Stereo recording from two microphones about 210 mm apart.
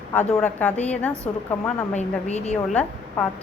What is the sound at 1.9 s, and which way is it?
Speech, 30° left (ahead or behind).